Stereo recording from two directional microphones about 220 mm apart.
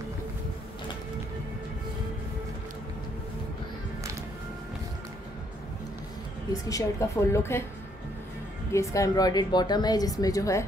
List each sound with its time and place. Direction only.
6.5 s a woman's voice: 15° left (ahead or behind)
8.7 s a woman's voice: 15° left (ahead or behind)